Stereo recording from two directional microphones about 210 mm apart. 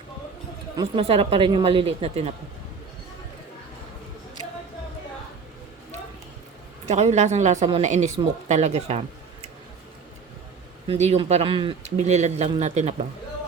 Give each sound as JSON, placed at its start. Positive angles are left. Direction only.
{"t": 0.8, "sound": "speech", "side_deg": -25}
{"t": 6.8, "sound": "speech", "side_deg": -30}
{"t": 10.8, "sound": "speech", "side_deg": -30}